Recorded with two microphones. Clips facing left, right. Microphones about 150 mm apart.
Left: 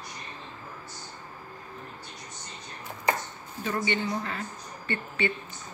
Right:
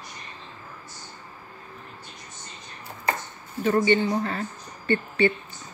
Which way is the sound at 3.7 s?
40° right (ahead or behind).